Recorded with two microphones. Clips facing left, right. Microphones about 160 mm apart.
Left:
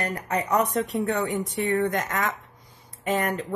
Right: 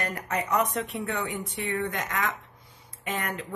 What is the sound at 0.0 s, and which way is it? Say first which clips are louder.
A woman's voice: left 3 dB; 35° left (ahead or behind).